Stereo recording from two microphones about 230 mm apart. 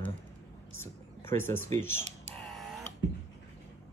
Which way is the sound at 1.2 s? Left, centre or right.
Centre.